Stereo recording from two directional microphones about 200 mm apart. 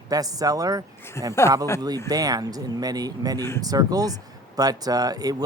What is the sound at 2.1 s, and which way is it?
Speech, 20° right (ahead or behind).